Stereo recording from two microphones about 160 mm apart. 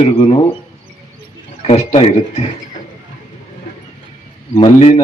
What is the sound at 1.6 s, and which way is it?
Speech, 40° left (ahead or behind).